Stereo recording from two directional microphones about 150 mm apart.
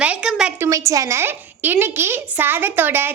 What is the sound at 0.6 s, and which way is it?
A woman's voice, 20° right (ahead or behind).